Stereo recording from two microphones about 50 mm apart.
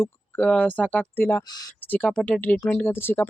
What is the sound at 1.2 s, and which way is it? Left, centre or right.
Speech, left.